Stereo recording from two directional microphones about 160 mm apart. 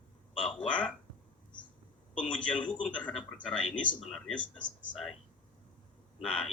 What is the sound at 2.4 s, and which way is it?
Speech, 5° left (ahead or behind).